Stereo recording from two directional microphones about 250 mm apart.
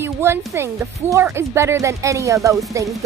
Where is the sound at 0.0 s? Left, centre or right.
Centre.